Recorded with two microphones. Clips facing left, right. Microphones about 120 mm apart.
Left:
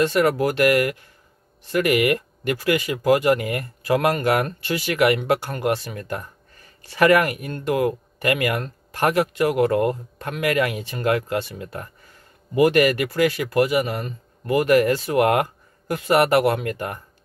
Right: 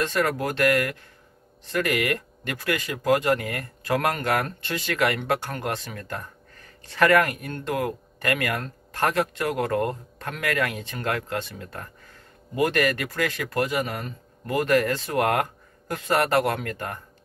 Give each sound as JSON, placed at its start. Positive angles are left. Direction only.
{"t": 0.0, "sound": "speech", "side_deg": 10}